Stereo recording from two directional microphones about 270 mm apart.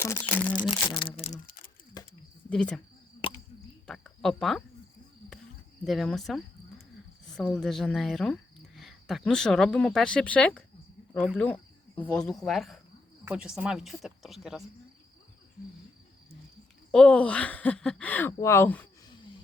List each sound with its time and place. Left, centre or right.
0.0 s speech: centre
0.9 s speech: centre
2.5 s speech: centre
3.8 s speech: centre
5.8 s speech: centre
16.9 s speech: centre